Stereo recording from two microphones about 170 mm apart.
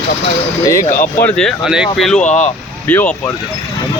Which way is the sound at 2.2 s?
45° left (ahead or behind).